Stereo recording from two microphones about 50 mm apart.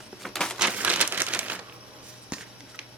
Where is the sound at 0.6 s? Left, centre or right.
Right.